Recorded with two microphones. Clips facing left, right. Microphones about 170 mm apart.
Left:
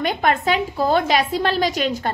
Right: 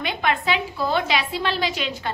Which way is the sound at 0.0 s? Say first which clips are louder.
Left 4 dB; 45° left (ahead or behind).